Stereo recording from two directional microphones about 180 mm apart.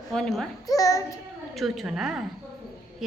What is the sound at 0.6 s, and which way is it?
Speech, 20° left (ahead or behind).